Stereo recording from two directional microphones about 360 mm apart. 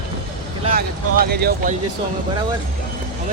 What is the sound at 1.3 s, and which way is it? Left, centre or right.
Speech, right.